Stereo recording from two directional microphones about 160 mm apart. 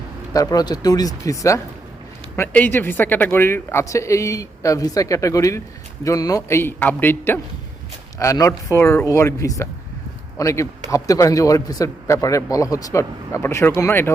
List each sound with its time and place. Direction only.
0.3 s a man's voice: 25° left (ahead or behind)